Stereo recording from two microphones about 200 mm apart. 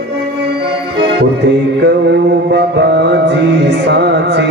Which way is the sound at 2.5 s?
60° right (ahead or behind).